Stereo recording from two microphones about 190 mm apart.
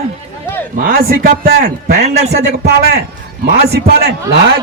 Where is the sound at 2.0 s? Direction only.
35° right (ahead or behind).